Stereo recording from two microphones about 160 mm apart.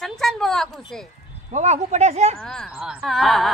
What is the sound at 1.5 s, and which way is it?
Speech, 45° right (ahead or behind).